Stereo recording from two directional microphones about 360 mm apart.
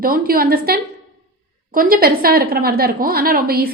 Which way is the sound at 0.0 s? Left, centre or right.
Right.